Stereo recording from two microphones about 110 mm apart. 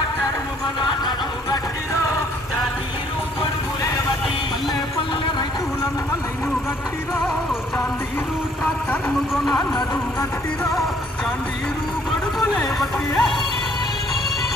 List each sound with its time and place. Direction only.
0.7 s music: 45° left (ahead or behind)
13.1 s speech: 10° left (ahead or behind)